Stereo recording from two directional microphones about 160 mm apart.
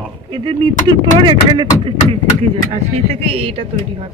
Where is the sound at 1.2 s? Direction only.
30° right (ahead or behind).